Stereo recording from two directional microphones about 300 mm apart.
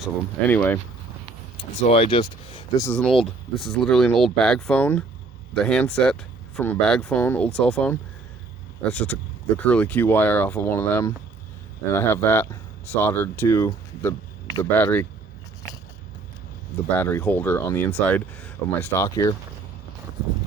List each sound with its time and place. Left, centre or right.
0.0 s speech: centre
1.9 s speech: centre
2.8 s speech: centre
17.0 s speech: centre